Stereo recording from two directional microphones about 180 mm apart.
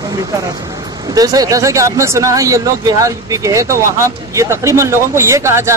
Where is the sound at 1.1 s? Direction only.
20° right (ahead or behind).